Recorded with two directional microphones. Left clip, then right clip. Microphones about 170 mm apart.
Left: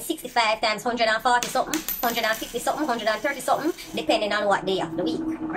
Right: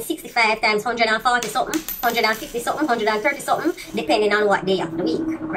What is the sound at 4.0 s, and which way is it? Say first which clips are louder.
A woman's voice: right 5 dB; 10° left (ahead or behind).